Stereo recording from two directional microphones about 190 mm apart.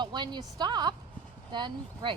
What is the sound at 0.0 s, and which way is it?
Speech, 25° right (ahead or behind).